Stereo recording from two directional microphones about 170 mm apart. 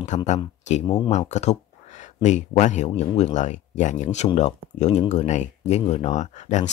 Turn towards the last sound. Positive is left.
turn(degrees=45)  # may be behind; listen again after turning